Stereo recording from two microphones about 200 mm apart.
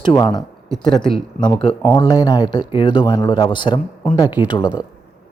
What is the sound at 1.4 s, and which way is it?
Speech, 25° left (ahead or behind).